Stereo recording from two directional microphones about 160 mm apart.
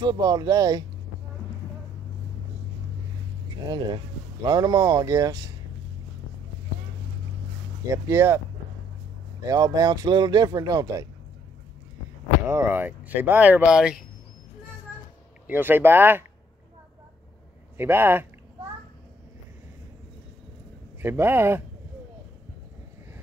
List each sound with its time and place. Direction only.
0.0 s speech: 25° right (ahead or behind)
3.6 s speech: 25° right (ahead or behind)
7.9 s speech: 15° right (ahead or behind)
9.4 s speech: 25° right (ahead or behind)
12.4 s speech: 15° right (ahead or behind)
15.4 s speech: 15° right (ahead or behind)
17.7 s speech: 15° right (ahead or behind)
21.0 s speech: 15° right (ahead or behind)